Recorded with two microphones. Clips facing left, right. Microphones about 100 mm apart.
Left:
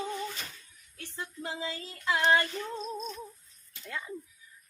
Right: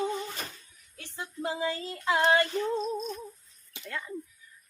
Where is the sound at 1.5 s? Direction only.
60° right (ahead or behind).